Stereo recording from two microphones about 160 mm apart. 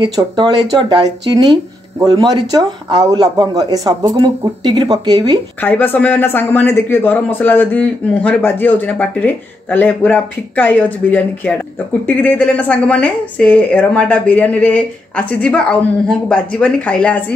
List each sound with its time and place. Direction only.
0.0 s speech: 25° right (ahead or behind)
5.6 s speech: 10° left (ahead or behind)